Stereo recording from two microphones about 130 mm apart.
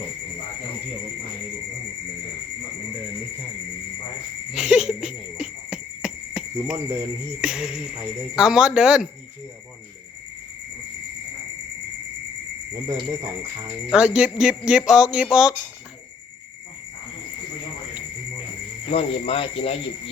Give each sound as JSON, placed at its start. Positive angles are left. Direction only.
{"t": 4.5, "sound": "a sound", "side_deg": -5}
{"t": 7.4, "sound": "speech", "side_deg": -5}
{"t": 13.9, "sound": "speech", "side_deg": -5}
{"t": 18.9, "sound": "speech", "side_deg": 50}